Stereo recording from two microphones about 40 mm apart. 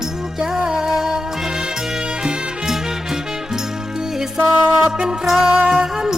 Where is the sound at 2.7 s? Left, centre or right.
Centre.